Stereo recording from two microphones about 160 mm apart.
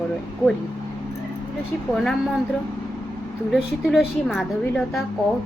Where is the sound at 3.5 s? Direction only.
Centre (ahead or behind).